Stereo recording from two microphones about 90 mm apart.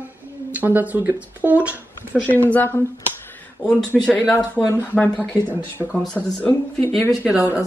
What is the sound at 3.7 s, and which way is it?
Speech, 10° left (ahead or behind).